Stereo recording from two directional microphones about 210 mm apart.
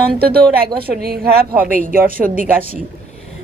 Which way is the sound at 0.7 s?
45° right (ahead or behind).